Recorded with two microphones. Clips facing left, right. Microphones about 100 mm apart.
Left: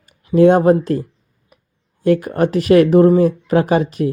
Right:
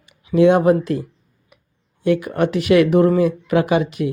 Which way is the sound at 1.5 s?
40° left (ahead or behind).